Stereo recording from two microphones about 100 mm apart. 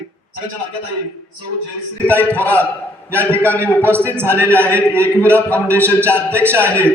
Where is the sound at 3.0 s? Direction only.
25° right (ahead or behind).